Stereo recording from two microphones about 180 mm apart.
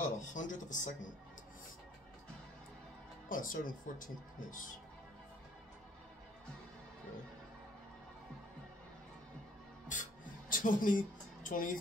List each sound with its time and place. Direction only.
0.2 s speech: 45° left (ahead or behind)
3.3 s speech: 50° left (ahead or behind)
9.9 s music: 45° left (ahead or behind)
10.5 s speech: 50° left (ahead or behind)